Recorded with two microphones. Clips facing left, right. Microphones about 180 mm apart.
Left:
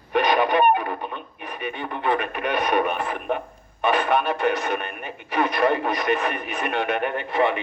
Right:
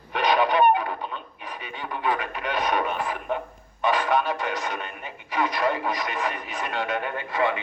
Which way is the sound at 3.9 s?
55° left (ahead or behind).